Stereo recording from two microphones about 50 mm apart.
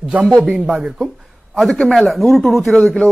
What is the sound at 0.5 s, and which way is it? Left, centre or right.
Speech, centre.